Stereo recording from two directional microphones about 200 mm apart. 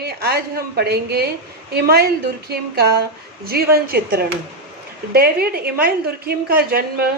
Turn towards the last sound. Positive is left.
turn(degrees=-50)  # may be behind; listen again after turning